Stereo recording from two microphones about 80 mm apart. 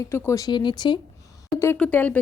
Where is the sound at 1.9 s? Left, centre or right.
Left.